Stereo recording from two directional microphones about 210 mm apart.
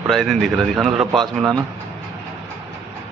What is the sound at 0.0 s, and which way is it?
Speech, centre (ahead or behind).